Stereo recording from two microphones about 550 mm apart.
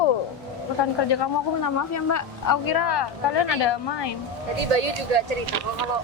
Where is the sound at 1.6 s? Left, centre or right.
Left.